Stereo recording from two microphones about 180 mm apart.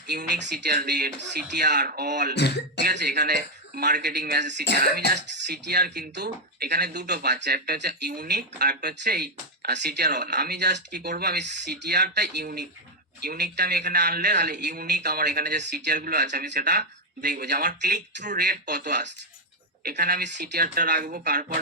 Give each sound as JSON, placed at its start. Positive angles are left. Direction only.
{"t": 0.1, "sound": "a man's voice", "side_deg": -70}
{"t": 2.3, "sound": "throat clearing", "side_deg": 70}
{"t": 2.8, "sound": "a man's voice", "side_deg": -65}
{"t": 4.8, "sound": "a man's voice", "side_deg": -60}
{"t": 18.3, "sound": "a man's voice", "side_deg": -65}